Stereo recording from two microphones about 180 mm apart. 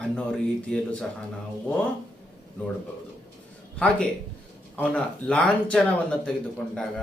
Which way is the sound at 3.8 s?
5° left (ahead or behind).